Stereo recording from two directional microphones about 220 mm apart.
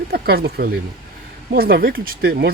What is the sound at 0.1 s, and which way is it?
Speech, 45° right (ahead or behind).